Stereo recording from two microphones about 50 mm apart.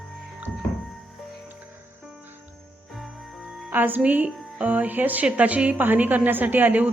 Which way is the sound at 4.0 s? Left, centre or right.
Right.